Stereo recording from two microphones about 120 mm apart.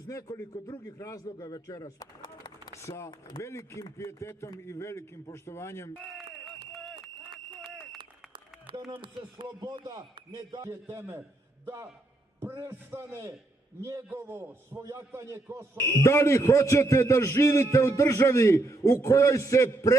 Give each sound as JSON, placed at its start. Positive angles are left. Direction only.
{"t": 0.1, "sound": "a man's voice", "side_deg": 25}
{"t": 1.2, "sound": "a man's voice", "side_deg": 35}
{"t": 1.6, "sound": "a sound", "side_deg": 25}
{"t": 2.7, "sound": "a man's voice", "side_deg": 25}
{"t": 6.7, "sound": "a sound", "side_deg": 0}
{"t": 7.9, "sound": "applause", "side_deg": -45}
{"t": 8.9, "sound": "speech", "side_deg": -45}
{"t": 10.7, "sound": "a man's voice", "side_deg": -20}
{"t": 16.0, "sound": "a man's voice", "side_deg": 25}